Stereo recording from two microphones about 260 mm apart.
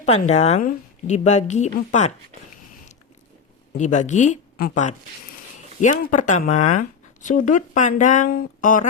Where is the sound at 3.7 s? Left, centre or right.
Left.